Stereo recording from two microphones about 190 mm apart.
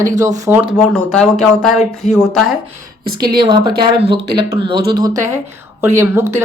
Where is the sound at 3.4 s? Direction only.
25° right (ahead or behind).